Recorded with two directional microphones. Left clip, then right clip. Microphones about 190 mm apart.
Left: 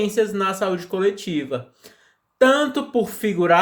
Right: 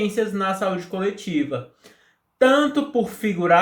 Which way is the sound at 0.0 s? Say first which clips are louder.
Left 2 dB; 45° left (ahead or behind).